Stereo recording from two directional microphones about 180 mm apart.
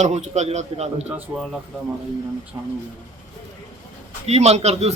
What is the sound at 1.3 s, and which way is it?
Speech, 15° right (ahead or behind).